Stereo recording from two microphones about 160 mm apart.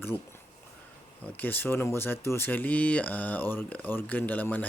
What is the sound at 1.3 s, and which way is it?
Speech, 10° left (ahead or behind).